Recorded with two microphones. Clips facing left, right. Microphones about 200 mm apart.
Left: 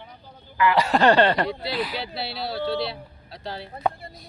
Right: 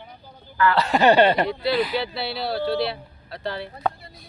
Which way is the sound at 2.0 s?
60° right (ahead or behind).